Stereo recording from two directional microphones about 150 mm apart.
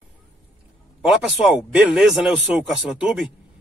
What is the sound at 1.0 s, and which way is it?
A man's voice, 5° right (ahead or behind).